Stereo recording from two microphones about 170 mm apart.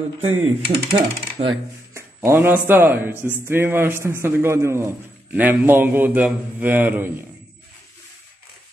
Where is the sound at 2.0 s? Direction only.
15° right (ahead or behind).